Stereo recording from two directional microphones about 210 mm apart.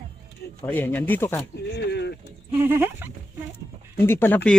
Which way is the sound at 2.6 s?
10° right (ahead or behind).